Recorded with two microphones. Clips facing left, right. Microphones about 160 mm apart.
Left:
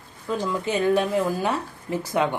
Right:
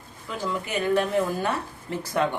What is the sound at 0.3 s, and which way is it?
Speech, 20° left (ahead or behind).